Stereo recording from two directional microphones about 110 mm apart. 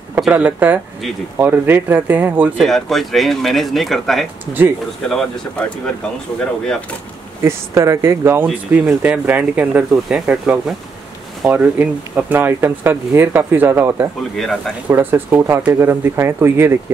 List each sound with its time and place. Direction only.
0.3 s speech: 15° right (ahead or behind)
2.6 s speech: centre (ahead or behind)
7.4 s speech: 25° right (ahead or behind)
14.3 s speech: 5° left (ahead or behind)
14.9 s speech: 20° right (ahead or behind)